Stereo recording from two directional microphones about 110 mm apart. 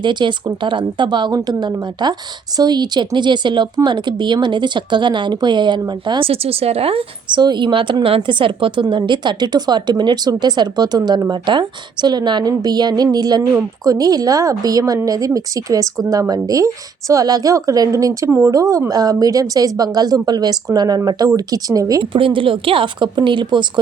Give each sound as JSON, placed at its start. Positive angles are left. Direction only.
{"t": 0.0, "sound": "speech", "side_deg": -45}
{"t": 6.2, "sound": "speech", "side_deg": -60}
{"t": 7.4, "sound": "speech", "side_deg": -45}
{"t": 22.1, "sound": "speech", "side_deg": -50}